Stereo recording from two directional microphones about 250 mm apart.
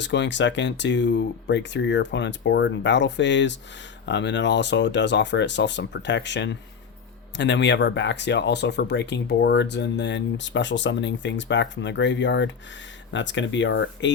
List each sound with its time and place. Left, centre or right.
0.0 s speech: left